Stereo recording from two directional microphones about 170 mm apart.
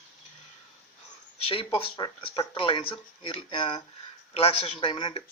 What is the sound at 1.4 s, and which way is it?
Speech, 30° left (ahead or behind).